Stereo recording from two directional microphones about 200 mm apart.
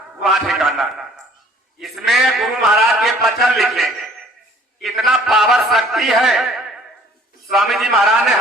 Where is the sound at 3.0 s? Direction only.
Centre (ahead or behind).